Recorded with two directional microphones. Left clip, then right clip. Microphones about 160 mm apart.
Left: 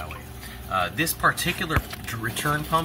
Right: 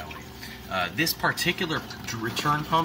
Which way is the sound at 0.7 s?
15° right (ahead or behind).